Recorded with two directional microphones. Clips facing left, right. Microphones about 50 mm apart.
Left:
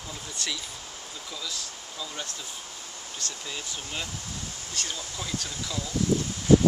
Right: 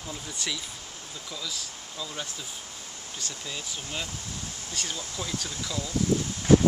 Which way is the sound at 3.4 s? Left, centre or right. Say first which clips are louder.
Even; centre.